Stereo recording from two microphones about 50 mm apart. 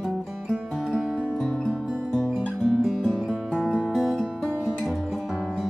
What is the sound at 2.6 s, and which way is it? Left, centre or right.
Music, centre.